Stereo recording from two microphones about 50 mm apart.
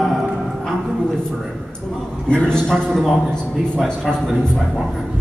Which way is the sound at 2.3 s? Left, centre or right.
Centre.